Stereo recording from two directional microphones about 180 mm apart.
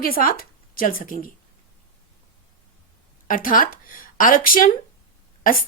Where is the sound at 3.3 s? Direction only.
50° left (ahead or behind).